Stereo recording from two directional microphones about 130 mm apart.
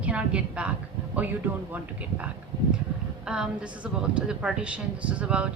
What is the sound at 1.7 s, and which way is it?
A woman's voice, 10° right (ahead or behind).